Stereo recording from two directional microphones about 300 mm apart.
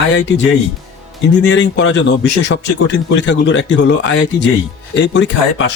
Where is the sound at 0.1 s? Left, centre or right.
Left.